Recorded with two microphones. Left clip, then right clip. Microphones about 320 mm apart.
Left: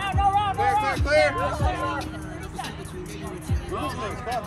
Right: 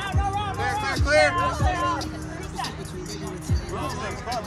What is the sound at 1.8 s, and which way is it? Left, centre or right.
Music, left.